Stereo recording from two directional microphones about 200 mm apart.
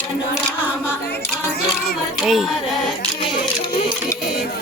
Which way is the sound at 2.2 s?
Centre (ahead or behind).